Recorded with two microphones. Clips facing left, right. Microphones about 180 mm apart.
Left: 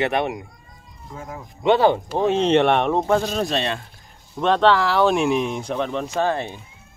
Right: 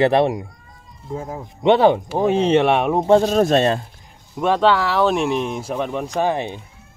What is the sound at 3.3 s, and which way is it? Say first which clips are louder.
Speech: right 8 dB; 45° right (ahead or behind).